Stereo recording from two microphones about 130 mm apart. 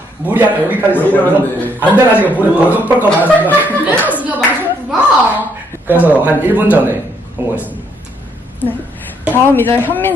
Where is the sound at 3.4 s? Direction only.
15° right (ahead or behind).